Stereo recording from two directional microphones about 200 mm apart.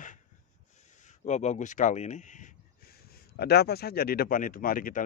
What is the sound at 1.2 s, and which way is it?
Speech, 35° left (ahead or behind).